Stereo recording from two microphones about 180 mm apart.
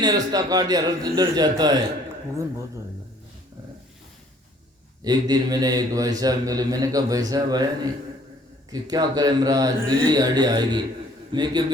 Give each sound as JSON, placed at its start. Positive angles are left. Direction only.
{"t": 0.0, "sound": "a man's voice", "side_deg": -20}
{"t": 5.0, "sound": "a man's voice", "side_deg": -20}